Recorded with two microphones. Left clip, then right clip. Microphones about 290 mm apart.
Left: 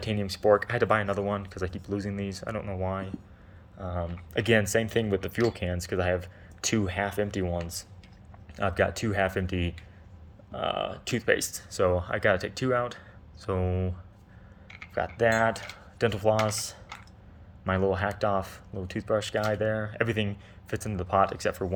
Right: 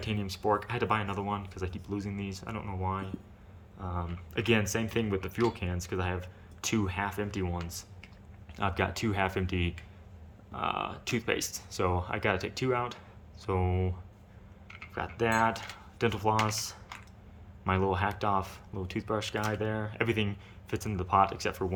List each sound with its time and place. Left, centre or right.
0.0 s speech: centre
3.8 s speech: right
4.4 s speech: centre
14.9 s speech: centre